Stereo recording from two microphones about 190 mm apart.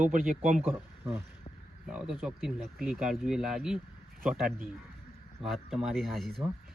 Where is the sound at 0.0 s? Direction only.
45° right (ahead or behind).